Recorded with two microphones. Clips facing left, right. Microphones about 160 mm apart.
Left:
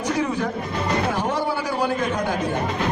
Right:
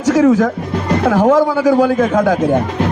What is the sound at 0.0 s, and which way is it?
Speech, 90° right.